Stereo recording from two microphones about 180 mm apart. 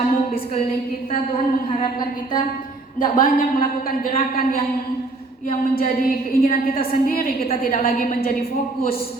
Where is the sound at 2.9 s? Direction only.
50° left (ahead or behind).